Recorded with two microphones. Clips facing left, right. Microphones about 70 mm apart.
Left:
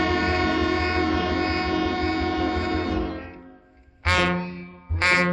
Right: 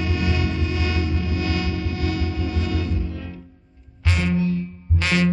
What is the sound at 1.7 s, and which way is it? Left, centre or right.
Train, left.